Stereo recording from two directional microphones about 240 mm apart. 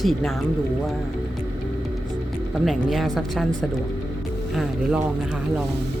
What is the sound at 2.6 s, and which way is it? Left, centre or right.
Speech, centre.